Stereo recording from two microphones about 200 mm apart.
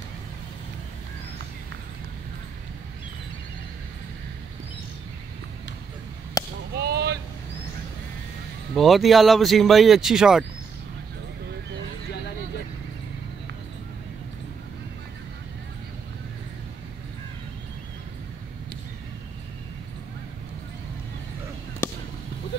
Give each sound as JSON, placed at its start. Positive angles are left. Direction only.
{"t": 6.4, "sound": "whip", "side_deg": 15}
{"t": 6.7, "sound": "a sound", "side_deg": -55}
{"t": 8.7, "sound": "speech", "side_deg": 0}